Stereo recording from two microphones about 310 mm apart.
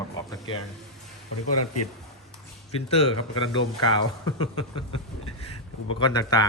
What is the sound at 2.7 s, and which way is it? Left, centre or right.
Speech, centre.